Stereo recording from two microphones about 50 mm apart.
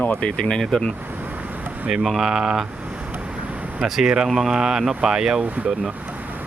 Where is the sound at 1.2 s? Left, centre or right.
Right.